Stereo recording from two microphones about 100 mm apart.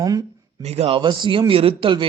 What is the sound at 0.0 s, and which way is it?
Speech, 35° right (ahead or behind).